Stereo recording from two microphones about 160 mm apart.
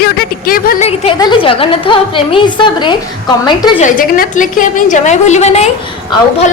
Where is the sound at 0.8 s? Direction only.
40° left (ahead or behind).